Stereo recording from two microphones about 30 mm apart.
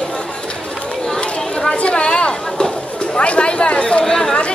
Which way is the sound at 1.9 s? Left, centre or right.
Left.